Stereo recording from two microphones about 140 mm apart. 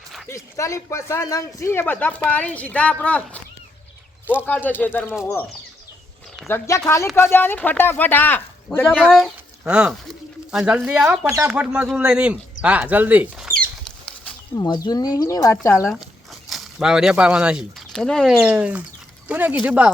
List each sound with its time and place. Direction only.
0.3 s speech: 20° left (ahead or behind)
4.4 s speech: 10° left (ahead or behind)
6.5 s speech: 20° left (ahead or behind)
9.0 s speech: centre (ahead or behind)
14.5 s speech: 30° left (ahead or behind)
15.9 s speech: centre (ahead or behind)
18.4 s speech: 10° right (ahead or behind)